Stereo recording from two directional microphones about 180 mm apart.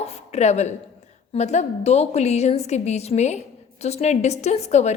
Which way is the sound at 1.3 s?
40° left (ahead or behind).